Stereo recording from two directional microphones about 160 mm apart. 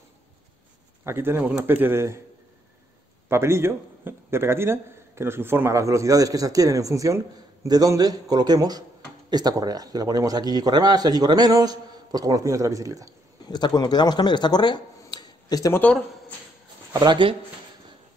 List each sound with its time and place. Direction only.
1.0 s a man's voice: 15° right (ahead or behind)
3.3 s a man's voice: 15° right (ahead or behind)
13.5 s speech: 25° left (ahead or behind)
15.8 s speech: 10° left (ahead or behind)
16.9 s a man's voice: 25° right (ahead or behind)